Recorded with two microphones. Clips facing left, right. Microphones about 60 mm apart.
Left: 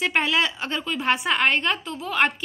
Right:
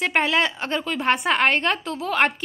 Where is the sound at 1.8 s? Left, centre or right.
Right.